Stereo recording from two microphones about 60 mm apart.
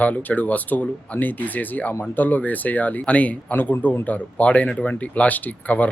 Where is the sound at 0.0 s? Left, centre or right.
Left.